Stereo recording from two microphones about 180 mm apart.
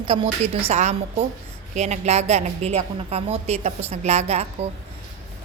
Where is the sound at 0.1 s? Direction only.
30° right (ahead or behind).